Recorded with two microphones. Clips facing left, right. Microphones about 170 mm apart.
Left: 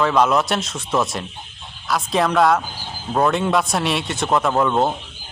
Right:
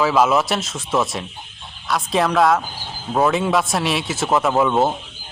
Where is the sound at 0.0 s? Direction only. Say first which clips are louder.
Right 1 dB; 5° right (ahead or behind).